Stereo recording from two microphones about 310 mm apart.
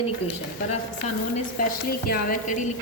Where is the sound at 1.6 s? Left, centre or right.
Left.